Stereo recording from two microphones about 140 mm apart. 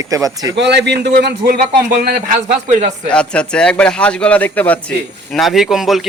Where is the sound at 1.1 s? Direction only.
90° right.